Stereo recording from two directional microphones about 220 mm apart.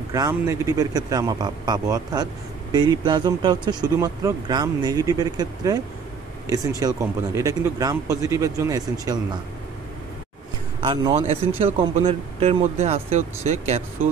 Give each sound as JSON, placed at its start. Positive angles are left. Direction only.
{"t": 0.1, "sound": "speech", "side_deg": -15}
{"t": 10.8, "sound": "speech", "side_deg": -25}